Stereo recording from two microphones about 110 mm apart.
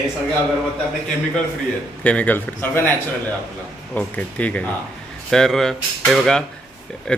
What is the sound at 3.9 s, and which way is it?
A man's voice, 15° left (ahead or behind).